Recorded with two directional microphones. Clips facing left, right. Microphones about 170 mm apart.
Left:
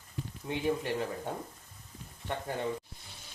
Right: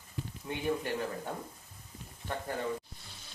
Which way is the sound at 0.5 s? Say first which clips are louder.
Left 3 dB; 25° left (ahead or behind).